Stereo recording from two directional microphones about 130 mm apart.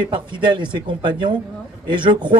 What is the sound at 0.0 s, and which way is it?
Speech, 35° right (ahead or behind).